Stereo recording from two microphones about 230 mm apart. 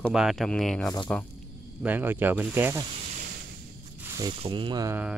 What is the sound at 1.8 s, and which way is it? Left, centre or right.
Speech, centre.